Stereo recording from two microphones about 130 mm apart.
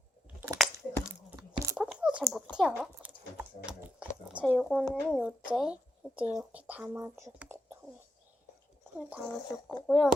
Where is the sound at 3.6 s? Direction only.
10° right (ahead or behind).